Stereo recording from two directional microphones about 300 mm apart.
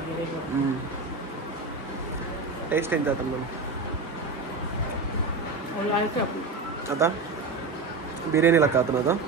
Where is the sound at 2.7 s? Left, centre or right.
Centre.